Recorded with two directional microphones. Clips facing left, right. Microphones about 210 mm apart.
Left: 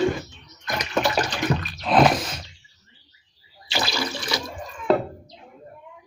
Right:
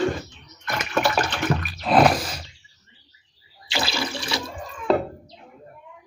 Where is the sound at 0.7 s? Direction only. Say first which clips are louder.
Even; 15° left (ahead or behind).